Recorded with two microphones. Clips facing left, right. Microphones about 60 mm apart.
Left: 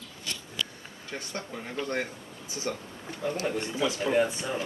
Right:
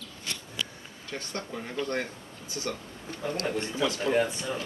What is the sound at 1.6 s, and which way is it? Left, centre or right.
Speech, centre.